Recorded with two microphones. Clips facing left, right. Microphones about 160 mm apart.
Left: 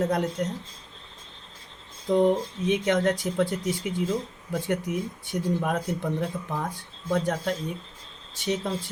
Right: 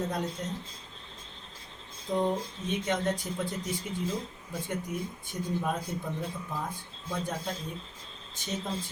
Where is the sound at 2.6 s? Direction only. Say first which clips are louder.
Left 7 dB; 80° left.